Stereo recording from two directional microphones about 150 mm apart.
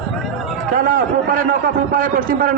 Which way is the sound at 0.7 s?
70° right (ahead or behind).